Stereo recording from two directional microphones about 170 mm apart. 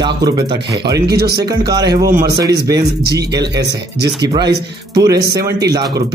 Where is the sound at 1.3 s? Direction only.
25° right (ahead or behind).